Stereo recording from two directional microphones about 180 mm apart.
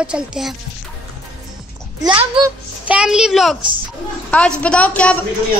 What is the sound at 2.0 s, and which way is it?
Speech, 25° right (ahead or behind).